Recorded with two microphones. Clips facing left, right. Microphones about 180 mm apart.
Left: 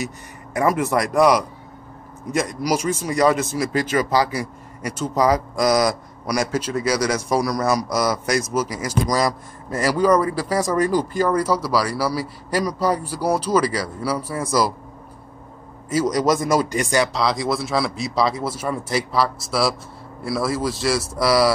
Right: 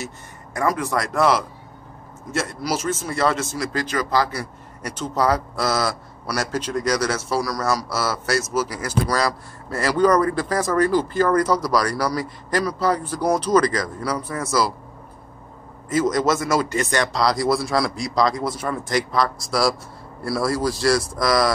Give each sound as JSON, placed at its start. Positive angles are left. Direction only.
{"t": 0.6, "sound": "speech", "side_deg": 20}
{"t": 15.9, "sound": "speech", "side_deg": 10}